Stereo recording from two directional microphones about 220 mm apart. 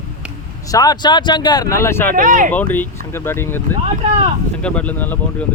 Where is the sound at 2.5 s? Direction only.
10° left (ahead or behind).